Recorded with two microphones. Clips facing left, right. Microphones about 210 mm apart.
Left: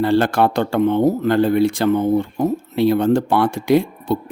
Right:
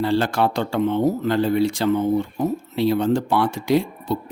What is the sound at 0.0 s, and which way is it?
Speech, 55° left (ahead or behind).